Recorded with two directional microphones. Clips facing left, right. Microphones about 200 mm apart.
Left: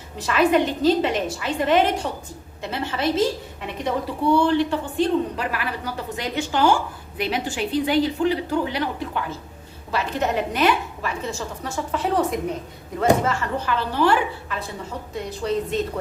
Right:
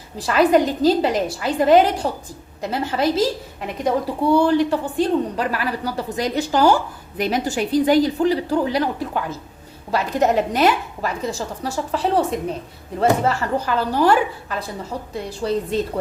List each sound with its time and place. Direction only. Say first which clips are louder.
0.2 s a woman's voice: right 3 dB; 35° right (ahead or behind)